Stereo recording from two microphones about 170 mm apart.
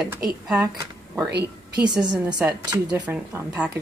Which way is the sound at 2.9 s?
10° right (ahead or behind).